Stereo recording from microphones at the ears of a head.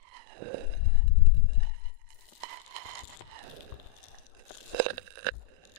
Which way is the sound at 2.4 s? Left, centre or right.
Right.